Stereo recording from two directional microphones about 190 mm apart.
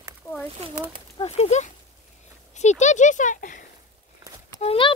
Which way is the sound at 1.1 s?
35° left (ahead or behind).